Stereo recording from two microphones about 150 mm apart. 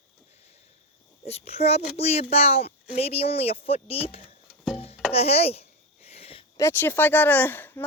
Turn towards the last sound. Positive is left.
turn(degrees=15)  # may be behind; listen again after turning